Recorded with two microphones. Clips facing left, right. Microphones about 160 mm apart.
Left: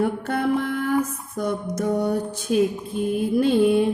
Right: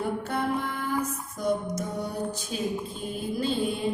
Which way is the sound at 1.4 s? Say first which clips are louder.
Left 3 dB; 65° left (ahead or behind).